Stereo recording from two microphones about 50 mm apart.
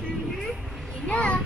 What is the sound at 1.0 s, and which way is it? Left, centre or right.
Speech, left.